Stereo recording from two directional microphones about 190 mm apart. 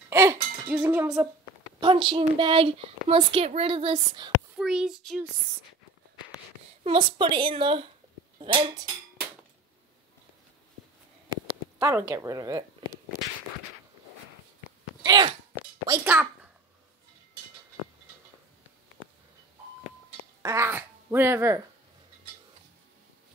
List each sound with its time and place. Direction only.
0.1 s speech: 15° right (ahead or behind)
1.8 s speech: 25° right (ahead or behind)
4.6 s a child's voice: 5° right (ahead or behind)
6.8 s speech: 25° right (ahead or behind)
11.8 s speech: 15° right (ahead or behind)
15.0 s sneeze: 25° right (ahead or behind)
15.5 s a sound: 10° right (ahead or behind)
20.4 s speech: 15° right (ahead or behind)